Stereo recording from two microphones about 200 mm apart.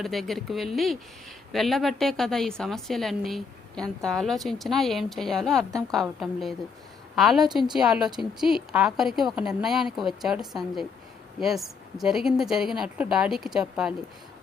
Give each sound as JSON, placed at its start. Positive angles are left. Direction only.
{"t": 0.0, "sound": "a woman's voice", "side_deg": 0}